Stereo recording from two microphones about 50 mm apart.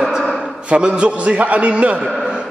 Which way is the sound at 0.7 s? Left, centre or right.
Right.